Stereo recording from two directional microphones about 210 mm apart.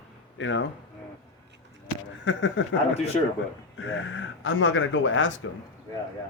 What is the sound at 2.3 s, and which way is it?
Speech, 65° left (ahead or behind).